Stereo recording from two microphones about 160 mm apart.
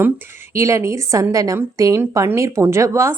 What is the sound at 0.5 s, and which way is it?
A woman's voice, 20° right (ahead or behind).